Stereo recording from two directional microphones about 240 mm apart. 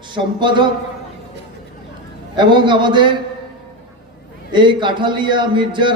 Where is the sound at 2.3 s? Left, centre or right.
Centre.